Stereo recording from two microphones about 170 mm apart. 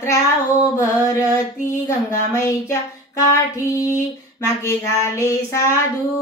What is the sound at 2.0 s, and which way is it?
Speech, 20° left (ahead or behind).